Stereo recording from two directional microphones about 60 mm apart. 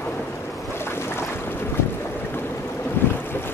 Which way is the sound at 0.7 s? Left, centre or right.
Left.